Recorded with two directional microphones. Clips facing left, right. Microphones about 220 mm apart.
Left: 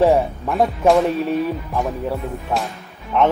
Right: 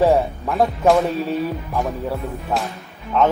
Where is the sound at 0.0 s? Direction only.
Centre (ahead or behind).